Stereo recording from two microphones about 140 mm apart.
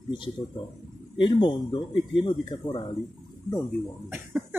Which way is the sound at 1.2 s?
30° left (ahead or behind).